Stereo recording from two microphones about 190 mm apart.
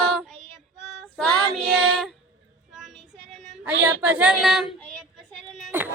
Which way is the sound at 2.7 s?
Centre (ahead or behind).